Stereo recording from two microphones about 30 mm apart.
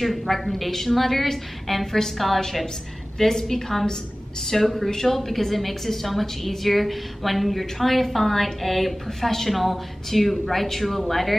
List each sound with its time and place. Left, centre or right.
0.0 s a woman's voice: centre
2.1 s a woman's voice: centre
3.2 s a woman's voice: centre